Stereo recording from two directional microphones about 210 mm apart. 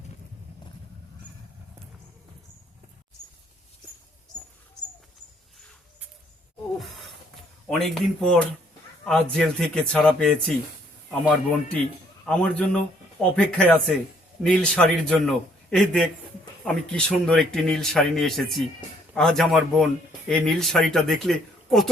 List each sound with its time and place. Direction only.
7.7 s speech: centre (ahead or behind)
12.2 s speech: 5° left (ahead or behind)